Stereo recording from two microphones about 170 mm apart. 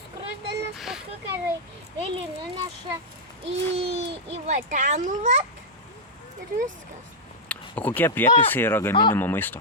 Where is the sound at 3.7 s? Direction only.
35° right (ahead or behind).